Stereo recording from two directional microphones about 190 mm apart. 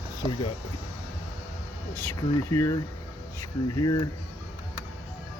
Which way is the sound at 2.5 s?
15° left (ahead or behind).